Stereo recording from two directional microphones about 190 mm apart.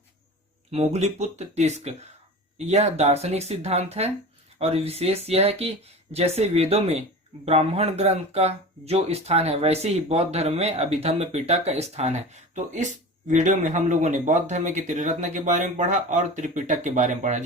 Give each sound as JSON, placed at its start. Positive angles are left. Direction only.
{"t": 0.7, "sound": "speech", "side_deg": -35}